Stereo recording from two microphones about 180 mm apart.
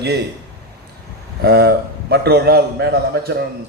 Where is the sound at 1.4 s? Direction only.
60° right (ahead or behind).